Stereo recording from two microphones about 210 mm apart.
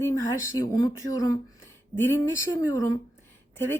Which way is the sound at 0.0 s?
15° left (ahead or behind).